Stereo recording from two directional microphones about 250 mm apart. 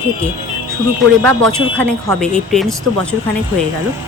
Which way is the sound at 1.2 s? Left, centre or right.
Centre.